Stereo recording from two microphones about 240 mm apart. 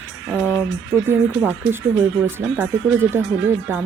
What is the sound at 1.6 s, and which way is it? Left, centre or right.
Speech, right.